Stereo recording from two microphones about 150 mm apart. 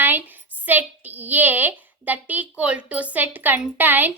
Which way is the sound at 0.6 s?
10° right (ahead or behind).